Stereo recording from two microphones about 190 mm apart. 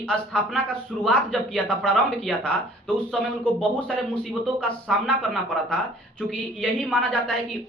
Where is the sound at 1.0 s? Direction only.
Centre (ahead or behind).